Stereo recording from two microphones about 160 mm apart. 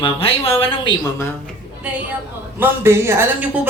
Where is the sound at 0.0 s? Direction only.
35° left (ahead or behind).